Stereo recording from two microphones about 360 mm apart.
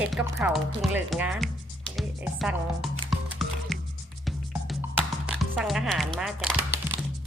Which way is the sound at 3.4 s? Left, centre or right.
Centre.